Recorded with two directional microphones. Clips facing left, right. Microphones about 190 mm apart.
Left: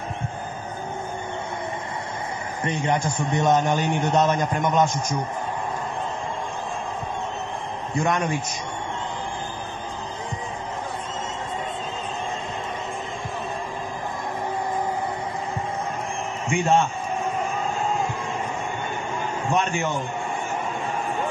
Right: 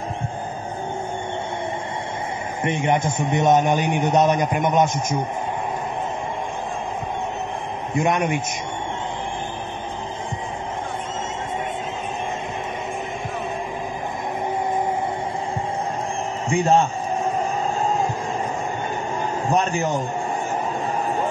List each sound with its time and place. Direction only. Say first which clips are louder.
2.6 s a man's voice: right 3 dB; 25° right (ahead or behind)
7.9 s a man's voice: right 3 dB; 20° right (ahead or behind)
16.4 s a man's voice: right 3 dB; 35° right (ahead or behind)
17.4 s music: right 3 dB; 40° right (ahead or behind)
19.4 s a man's voice: right 3 dB; 40° right (ahead or behind)